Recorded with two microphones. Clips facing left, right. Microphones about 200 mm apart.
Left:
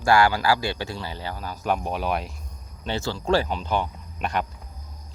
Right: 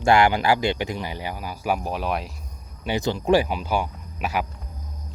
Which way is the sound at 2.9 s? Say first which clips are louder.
Right 3 dB; 15° right (ahead or behind).